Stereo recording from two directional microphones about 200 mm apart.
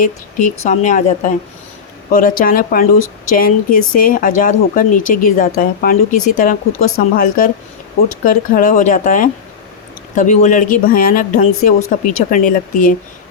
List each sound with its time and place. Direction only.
0.0 s speech: 40° left (ahead or behind)